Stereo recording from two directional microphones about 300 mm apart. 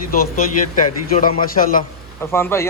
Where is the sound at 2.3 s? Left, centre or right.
Centre.